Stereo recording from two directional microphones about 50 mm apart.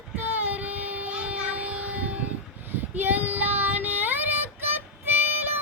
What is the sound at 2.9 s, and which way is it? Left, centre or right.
Child singing, right.